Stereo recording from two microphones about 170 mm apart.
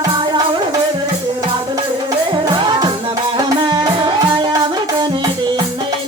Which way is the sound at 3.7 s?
25° right (ahead or behind).